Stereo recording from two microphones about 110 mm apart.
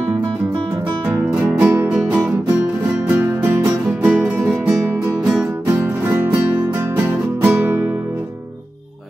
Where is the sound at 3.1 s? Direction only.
20° right (ahead or behind).